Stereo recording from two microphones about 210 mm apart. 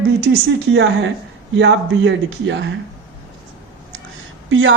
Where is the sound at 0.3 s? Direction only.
50° right (ahead or behind).